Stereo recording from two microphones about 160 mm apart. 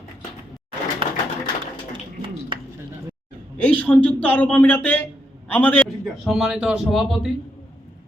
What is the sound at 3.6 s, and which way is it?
A man's voice, 10° left (ahead or behind).